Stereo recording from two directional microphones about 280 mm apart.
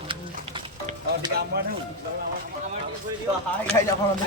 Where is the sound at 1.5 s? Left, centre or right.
Right.